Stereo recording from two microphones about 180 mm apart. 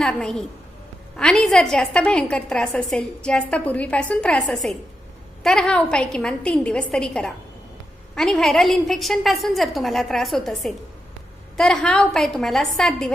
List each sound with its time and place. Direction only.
0.0 s a woman's voice: 5° left (ahead or behind)